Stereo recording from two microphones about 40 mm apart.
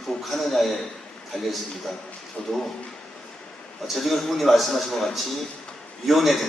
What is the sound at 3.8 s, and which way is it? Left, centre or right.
A man's voice, centre.